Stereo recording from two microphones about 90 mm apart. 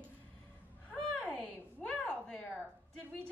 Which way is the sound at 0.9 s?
15° left (ahead or behind).